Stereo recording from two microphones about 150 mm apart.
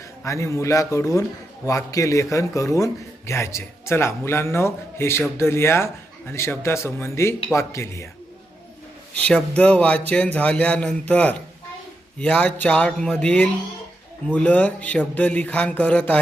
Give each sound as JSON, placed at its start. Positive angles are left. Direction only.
{"t": 0.3, "sound": "a man's voice", "side_deg": 20}
{"t": 9.1, "sound": "speech", "side_deg": 10}